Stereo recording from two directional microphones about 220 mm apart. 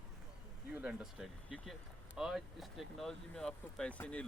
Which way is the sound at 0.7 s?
5° right (ahead or behind).